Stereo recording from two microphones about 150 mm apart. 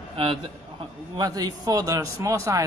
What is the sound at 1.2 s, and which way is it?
Speech, 25° right (ahead or behind).